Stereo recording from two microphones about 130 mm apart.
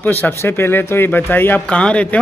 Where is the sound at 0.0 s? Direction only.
15° left (ahead or behind).